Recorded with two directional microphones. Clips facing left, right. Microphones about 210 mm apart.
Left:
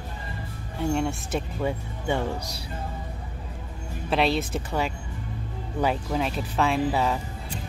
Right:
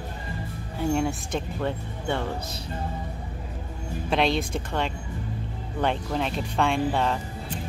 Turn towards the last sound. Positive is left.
turn(degrees=5)  # may be behind; listen again after turning